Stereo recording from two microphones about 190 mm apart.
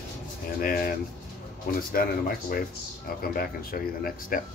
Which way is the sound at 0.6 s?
50° left (ahead or behind).